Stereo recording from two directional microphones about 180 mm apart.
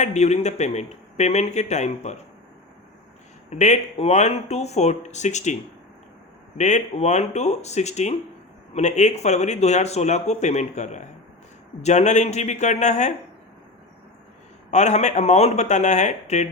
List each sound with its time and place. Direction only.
0.0 s speech: 40° left (ahead or behind)
3.5 s speech: 40° left (ahead or behind)
6.6 s speech: 40° left (ahead or behind)
14.7 s speech: 40° left (ahead or behind)